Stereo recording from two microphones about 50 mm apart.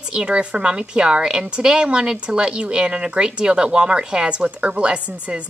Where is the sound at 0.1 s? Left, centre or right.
Centre.